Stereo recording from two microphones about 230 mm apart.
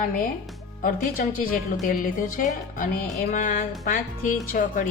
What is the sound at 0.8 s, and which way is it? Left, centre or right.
Speech, left.